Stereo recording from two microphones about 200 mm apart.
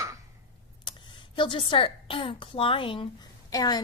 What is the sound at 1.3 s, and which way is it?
A woman's voice, 25° left (ahead or behind).